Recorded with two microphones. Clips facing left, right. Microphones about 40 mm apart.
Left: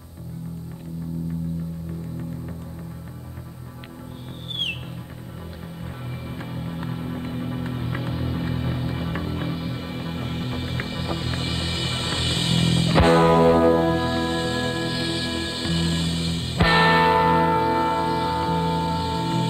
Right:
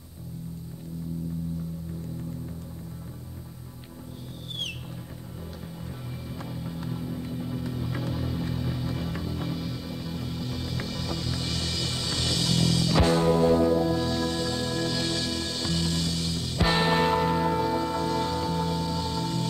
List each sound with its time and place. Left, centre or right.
6.3 s music: left